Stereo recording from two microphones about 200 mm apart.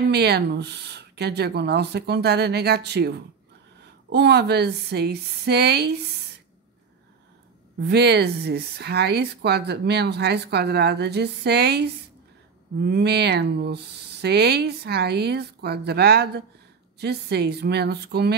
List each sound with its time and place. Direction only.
0.1 s a woman's voice: 55° right (ahead or behind)
7.8 s a woman's voice: 55° right (ahead or behind)